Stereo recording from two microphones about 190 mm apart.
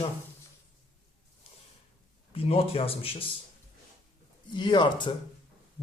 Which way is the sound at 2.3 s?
30° left (ahead or behind).